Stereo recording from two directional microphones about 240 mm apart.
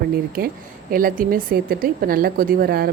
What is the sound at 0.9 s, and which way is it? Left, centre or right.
A woman's voice, right.